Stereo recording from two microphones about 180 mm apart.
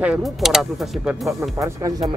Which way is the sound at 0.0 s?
5° right (ahead or behind).